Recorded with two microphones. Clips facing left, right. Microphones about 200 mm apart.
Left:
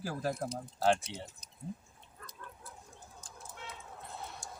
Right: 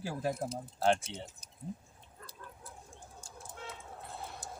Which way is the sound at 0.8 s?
5° left (ahead or behind).